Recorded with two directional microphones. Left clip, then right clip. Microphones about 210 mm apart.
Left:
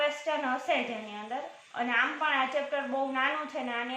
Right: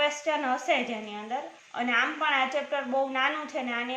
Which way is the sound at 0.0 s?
50° right (ahead or behind).